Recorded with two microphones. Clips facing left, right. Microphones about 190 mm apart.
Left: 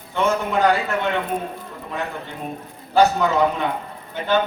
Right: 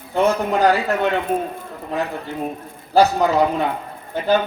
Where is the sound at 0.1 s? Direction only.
35° right (ahead or behind).